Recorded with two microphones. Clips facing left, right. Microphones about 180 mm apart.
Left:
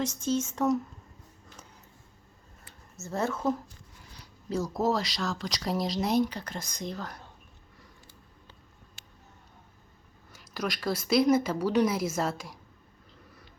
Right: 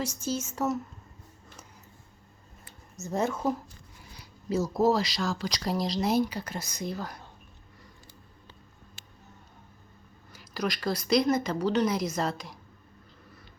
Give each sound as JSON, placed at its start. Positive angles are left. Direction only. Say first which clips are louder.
{"t": 0.0, "sound": "speech", "louder": "left 3 dB", "side_deg": -10}
{"t": 2.9, "sound": "speech", "louder": "right 2 dB", "side_deg": -15}
{"t": 10.3, "sound": "speech", "louder": "right 2 dB", "side_deg": 0}